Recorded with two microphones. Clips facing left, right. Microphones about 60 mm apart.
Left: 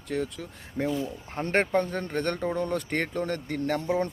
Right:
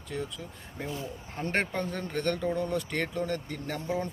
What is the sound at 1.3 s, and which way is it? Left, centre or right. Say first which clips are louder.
Speech: left 6 dB; left.